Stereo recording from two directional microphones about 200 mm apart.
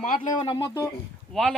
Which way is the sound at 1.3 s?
Centre (ahead or behind).